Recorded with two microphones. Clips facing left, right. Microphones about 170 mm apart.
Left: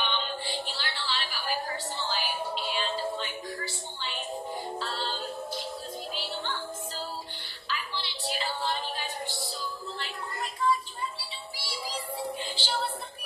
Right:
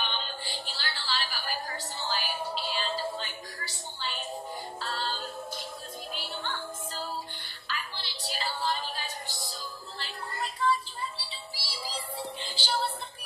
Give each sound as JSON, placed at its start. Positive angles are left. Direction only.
{"t": 0.0, "sound": "music", "side_deg": -40}
{"t": 6.1, "sound": "music", "side_deg": -50}
{"t": 7.6, "sound": "music", "side_deg": -45}
{"t": 10.6, "sound": "a sound", "side_deg": -30}
{"t": 11.5, "sound": "music", "side_deg": -30}